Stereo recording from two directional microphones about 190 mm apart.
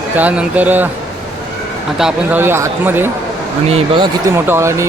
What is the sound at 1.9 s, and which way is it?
Speech, 5° right (ahead or behind).